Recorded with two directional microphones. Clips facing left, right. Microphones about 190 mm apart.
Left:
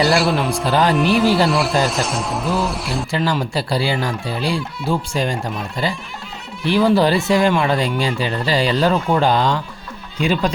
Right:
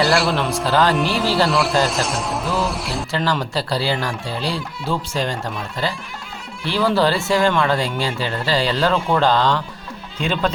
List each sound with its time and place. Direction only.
0.0 s speech: centre (ahead or behind)
0.5 s speech: 15° left (ahead or behind)
1.5 s speech: centre (ahead or behind)
3.1 s speech: 10° left (ahead or behind)